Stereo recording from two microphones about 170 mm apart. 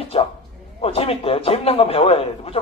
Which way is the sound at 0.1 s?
35° left (ahead or behind).